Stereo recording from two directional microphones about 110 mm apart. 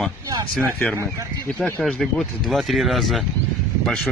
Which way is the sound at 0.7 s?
15° left (ahead or behind).